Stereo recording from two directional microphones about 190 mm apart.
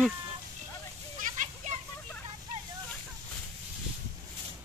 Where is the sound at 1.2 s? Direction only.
40° right (ahead or behind).